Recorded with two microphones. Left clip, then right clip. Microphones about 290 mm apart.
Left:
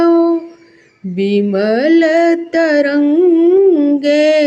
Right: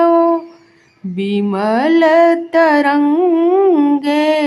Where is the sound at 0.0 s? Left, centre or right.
Centre.